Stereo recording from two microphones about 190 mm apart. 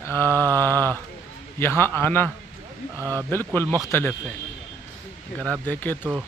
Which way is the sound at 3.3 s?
10° left (ahead or behind).